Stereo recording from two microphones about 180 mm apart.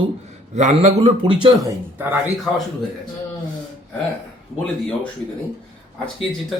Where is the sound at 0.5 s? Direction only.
40° right (ahead or behind).